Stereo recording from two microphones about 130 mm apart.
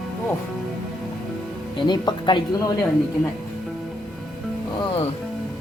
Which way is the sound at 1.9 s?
35° left (ahead or behind).